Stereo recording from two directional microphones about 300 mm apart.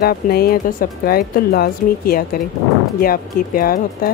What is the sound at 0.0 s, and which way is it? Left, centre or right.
Speech, left.